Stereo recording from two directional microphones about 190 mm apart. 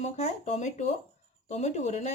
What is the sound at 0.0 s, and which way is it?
Speech, 35° left (ahead or behind).